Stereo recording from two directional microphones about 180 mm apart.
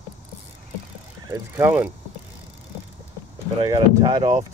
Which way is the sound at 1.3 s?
20° right (ahead or behind).